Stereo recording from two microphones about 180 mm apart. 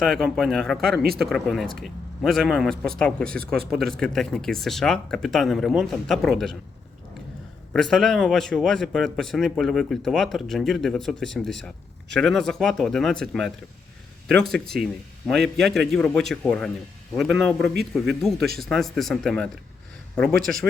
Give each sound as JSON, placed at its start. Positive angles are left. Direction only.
{"t": 0.0, "sound": "speech", "side_deg": 0}
{"t": 1.0, "sound": "speech", "side_deg": -55}
{"t": 1.3, "sound": "speech", "side_deg": 0}
{"t": 7.7, "sound": "speech", "side_deg": 0}